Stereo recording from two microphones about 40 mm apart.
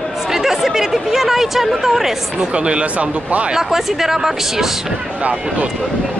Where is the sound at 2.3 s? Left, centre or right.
Right.